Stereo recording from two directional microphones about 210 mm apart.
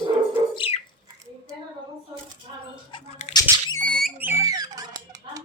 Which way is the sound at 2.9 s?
30° left (ahead or behind).